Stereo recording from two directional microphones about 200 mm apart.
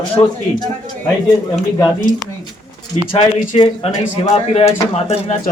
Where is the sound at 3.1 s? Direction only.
25° left (ahead or behind).